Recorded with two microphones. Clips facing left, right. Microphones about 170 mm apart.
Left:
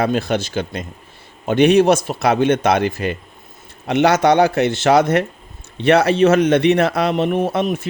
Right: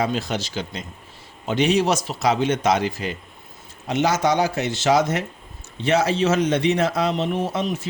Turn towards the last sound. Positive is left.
turn(degrees=60)  # may be behind; listen again after turning